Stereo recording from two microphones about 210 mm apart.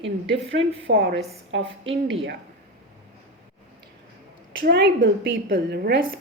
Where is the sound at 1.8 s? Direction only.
25° right (ahead or behind).